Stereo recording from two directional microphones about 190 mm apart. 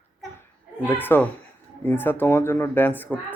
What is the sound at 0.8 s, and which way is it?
Speech, 10° left (ahead or behind).